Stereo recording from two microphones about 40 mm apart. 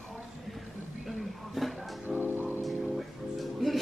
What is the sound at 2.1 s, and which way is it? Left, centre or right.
Music, right.